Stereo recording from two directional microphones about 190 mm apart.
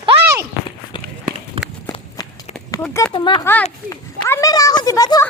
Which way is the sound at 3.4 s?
10° left (ahead or behind).